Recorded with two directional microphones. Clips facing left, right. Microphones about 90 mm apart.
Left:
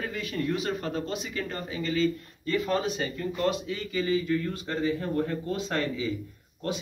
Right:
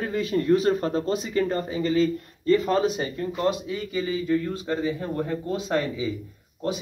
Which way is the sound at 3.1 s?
20° right (ahead or behind).